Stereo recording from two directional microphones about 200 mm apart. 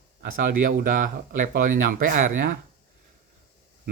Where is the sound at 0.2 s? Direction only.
50° right (ahead or behind).